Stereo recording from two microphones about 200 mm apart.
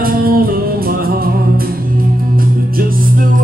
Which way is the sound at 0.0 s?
45° right (ahead or behind).